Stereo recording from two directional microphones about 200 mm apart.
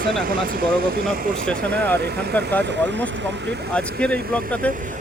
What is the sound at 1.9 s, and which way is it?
Speech, 55° right (ahead or behind).